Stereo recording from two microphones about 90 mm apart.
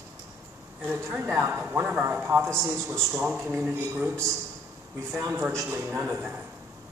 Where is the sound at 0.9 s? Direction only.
25° right (ahead or behind).